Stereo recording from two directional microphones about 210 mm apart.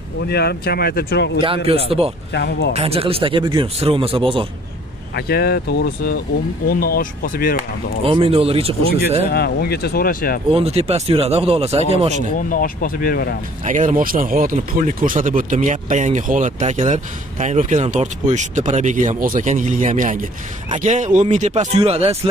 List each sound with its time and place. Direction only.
0.3 s speech: 50° left (ahead or behind)
1.4 s speech: 25° right (ahead or behind)
2.3 s speech: 55° left (ahead or behind)
2.7 s speech: 30° right (ahead or behind)
5.1 s speech: 50° left (ahead or behind)
8.0 s speech: 25° right (ahead or behind)
9.3 s speech: 50° left (ahead or behind)
10.5 s speech: 30° right (ahead or behind)
12.4 s speech: 40° left (ahead or behind)
13.7 s speech: 35° right (ahead or behind)